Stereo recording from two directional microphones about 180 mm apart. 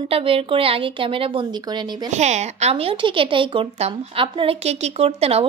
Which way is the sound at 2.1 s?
40° right (ahead or behind).